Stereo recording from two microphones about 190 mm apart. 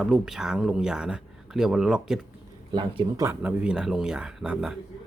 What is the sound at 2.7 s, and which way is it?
Speech, 25° right (ahead or behind).